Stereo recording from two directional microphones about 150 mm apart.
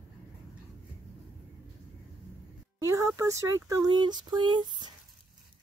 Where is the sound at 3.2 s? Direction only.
20° right (ahead or behind).